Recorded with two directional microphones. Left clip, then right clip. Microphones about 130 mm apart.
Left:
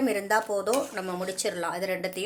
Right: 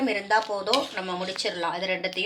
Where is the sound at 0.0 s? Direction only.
75° left (ahead or behind).